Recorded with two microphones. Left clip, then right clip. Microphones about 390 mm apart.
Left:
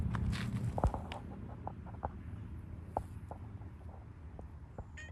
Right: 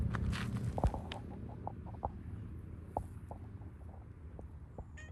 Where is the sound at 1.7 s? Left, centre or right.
Centre.